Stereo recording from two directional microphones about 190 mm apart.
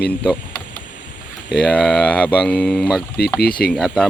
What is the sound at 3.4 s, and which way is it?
Speech, 50° left (ahead or behind).